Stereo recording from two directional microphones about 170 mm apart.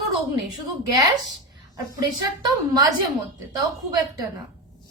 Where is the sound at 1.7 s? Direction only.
20° right (ahead or behind).